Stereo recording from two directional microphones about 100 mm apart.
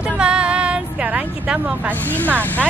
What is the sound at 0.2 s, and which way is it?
Female singing, 10° right (ahead or behind).